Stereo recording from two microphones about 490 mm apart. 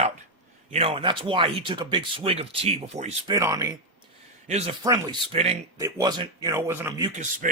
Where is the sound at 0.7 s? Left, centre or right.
Centre.